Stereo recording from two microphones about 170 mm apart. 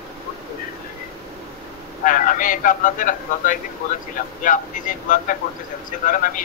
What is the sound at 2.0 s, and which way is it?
A man's voice, 50° left (ahead or behind).